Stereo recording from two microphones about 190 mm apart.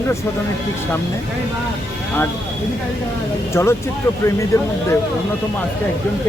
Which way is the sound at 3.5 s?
15° left (ahead or behind).